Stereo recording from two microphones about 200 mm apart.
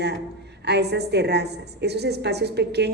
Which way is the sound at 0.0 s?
55° right (ahead or behind).